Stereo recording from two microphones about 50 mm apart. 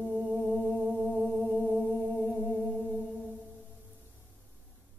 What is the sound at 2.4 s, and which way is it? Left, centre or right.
Music, right.